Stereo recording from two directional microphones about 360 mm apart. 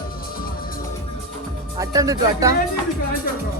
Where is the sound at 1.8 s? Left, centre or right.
Centre.